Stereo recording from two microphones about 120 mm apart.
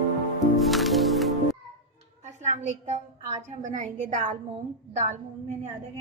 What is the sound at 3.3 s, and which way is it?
A woman's voice, 80° right.